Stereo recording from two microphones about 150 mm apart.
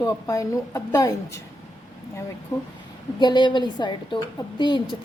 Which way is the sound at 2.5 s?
20° left (ahead or behind).